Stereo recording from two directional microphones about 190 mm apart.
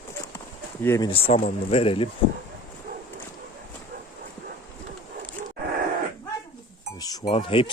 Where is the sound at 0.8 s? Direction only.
15° left (ahead or behind).